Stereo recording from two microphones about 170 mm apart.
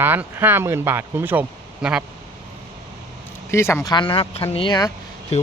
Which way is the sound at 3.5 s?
15° left (ahead or behind).